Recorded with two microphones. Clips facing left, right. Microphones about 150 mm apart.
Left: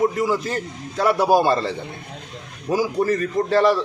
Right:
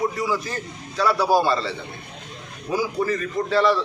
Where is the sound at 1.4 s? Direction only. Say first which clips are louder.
Left 3 dB; 45° left (ahead or behind).